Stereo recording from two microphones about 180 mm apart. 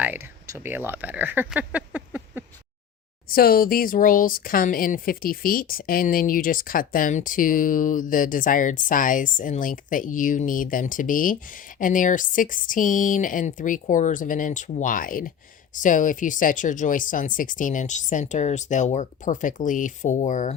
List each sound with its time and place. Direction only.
0.0 s speech: 10° right (ahead or behind)
3.2 s speech: 55° left (ahead or behind)